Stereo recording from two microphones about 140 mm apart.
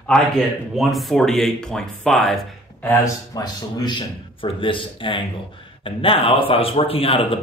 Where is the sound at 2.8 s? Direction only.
25° left (ahead or behind); by 7.4 s 40° left (ahead or behind).